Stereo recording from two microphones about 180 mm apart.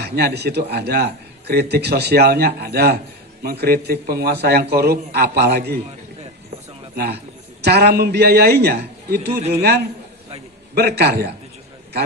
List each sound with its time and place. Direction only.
0.0 s a man's voice: 60° right (ahead or behind)
6.9 s a man's voice: 60° right (ahead or behind)
10.8 s a man's voice: 65° right (ahead or behind)